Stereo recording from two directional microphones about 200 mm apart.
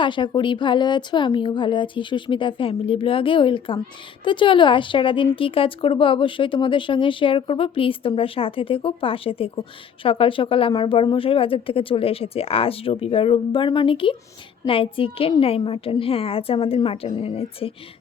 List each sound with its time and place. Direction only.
0.0 s speech: 25° left (ahead or behind)